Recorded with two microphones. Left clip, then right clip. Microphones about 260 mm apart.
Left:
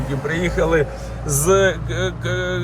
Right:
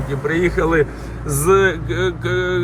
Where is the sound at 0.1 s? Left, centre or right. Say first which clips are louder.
Right 4 dB; centre.